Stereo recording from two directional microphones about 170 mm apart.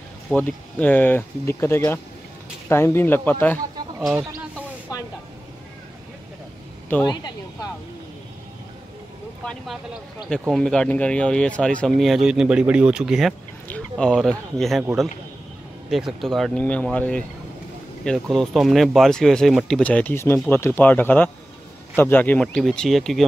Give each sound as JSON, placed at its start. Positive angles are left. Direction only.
{"t": 0.3, "sound": "speech", "side_deg": 5}
{"t": 4.1, "sound": "a sound", "side_deg": -15}
{"t": 7.1, "sound": "speech", "side_deg": 20}
{"t": 9.4, "sound": "speech", "side_deg": 5}
{"t": 15.9, "sound": "speech", "side_deg": 0}